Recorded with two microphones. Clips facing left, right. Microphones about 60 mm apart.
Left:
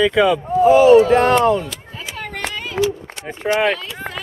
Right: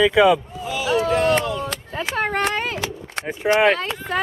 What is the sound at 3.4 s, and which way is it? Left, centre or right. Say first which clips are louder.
Speech: right 1 dB; centre.